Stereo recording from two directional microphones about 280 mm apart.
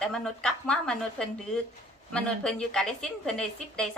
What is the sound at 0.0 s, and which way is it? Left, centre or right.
A woman's voice, centre.